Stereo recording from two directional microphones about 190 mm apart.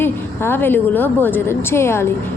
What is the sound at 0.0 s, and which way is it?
A woman's voice, 10° left (ahead or behind).